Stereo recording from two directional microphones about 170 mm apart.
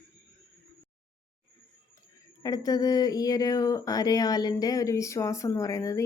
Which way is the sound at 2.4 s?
20° left (ahead or behind).